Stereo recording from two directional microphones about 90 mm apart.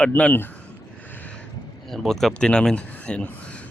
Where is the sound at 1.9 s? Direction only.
5° left (ahead or behind).